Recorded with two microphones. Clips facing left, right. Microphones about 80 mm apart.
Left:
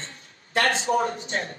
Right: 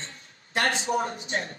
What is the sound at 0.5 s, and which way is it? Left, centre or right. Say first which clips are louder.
Speech: left 3 dB; left.